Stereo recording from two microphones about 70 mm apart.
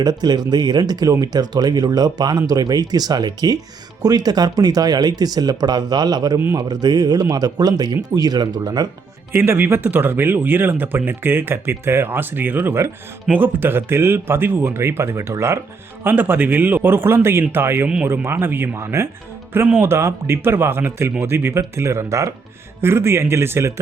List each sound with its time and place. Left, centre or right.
0.0 s speech: right
9.3 s speech: right
16.0 s speech: right